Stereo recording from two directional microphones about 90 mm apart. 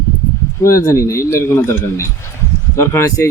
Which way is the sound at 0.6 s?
35° left (ahead or behind).